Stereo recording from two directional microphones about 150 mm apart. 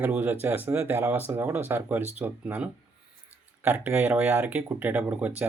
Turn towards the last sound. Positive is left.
turn(degrees=-10)  # may be behind; listen again after turning